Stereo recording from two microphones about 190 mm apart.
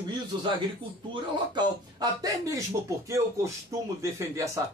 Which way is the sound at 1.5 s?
20° right (ahead or behind).